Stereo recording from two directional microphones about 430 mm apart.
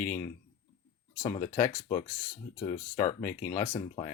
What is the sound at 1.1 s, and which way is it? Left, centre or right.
Speech, centre.